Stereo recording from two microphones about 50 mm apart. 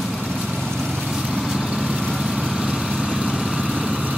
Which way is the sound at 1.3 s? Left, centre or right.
Centre.